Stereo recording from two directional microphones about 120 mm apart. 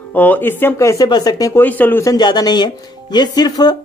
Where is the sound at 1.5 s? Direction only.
15° left (ahead or behind).